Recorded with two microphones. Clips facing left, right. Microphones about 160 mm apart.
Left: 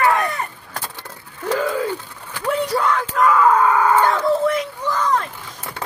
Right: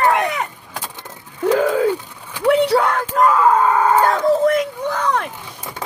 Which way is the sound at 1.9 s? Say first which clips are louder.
Right 6 dB; 15° right (ahead or behind).